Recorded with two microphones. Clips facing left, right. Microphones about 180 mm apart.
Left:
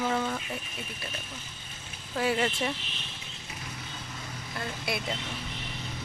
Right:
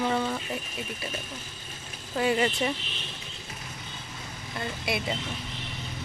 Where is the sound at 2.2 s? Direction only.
Centre (ahead or behind).